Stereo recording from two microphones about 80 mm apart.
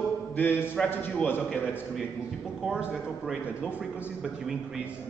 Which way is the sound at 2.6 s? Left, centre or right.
Centre.